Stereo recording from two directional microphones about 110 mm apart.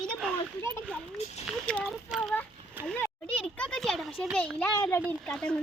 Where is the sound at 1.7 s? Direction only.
15° left (ahead or behind).